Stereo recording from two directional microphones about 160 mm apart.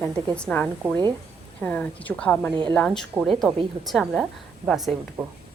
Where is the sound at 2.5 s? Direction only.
30° right (ahead or behind).